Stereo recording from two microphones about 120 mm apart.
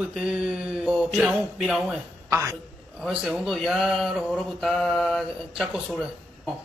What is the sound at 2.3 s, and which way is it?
Speech, 25° right (ahead or behind).